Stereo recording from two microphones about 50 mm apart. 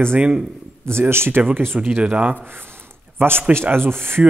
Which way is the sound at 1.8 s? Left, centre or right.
Right.